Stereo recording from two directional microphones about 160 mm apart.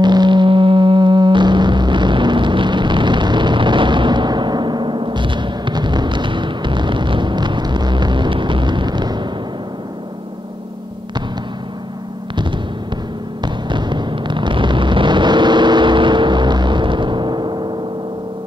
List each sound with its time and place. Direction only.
0.0 s music: 25° right (ahead or behind)
13.4 s music: 30° right (ahead or behind)